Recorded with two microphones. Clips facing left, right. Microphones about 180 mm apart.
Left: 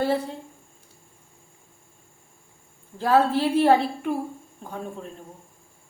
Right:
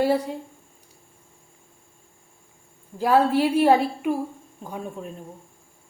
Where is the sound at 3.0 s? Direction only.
10° right (ahead or behind).